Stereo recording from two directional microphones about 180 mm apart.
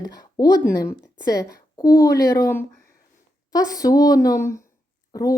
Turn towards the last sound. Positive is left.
turn(degrees=20)  # may be behind; listen again after turning